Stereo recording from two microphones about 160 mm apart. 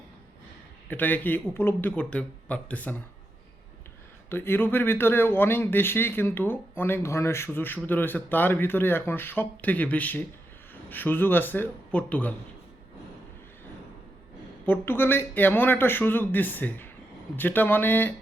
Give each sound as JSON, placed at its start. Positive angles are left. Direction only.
{"t": 0.9, "sound": "speech", "side_deg": 10}
{"t": 4.3, "sound": "speech", "side_deg": 15}
{"t": 14.6, "sound": "speech", "side_deg": 15}